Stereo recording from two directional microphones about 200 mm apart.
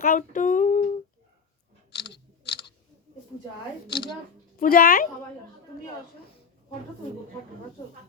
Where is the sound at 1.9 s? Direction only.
60° left (ahead or behind).